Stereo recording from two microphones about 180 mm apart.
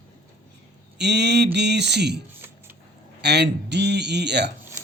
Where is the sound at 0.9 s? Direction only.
70° right (ahead or behind).